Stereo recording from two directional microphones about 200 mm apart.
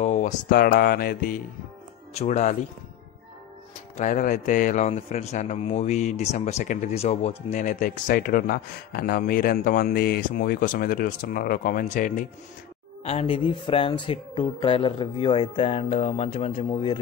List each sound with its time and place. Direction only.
0.0 s mantra: 35° left (ahead or behind)
2.1 s speech: 35° left (ahead or behind)
3.9 s speech: 40° left (ahead or behind)
13.0 s speech: 30° left (ahead or behind)